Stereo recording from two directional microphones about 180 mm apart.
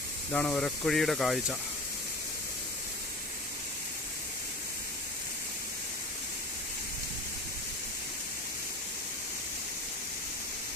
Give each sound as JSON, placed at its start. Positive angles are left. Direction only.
{"t": 0.3, "sound": "speech", "side_deg": 5}